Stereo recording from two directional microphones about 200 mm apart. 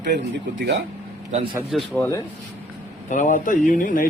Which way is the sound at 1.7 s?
5° left (ahead or behind).